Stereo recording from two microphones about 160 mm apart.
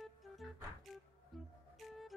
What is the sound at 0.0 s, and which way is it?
Music, centre (ahead or behind).